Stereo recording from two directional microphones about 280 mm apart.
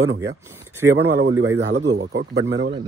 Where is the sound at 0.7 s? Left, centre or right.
Centre.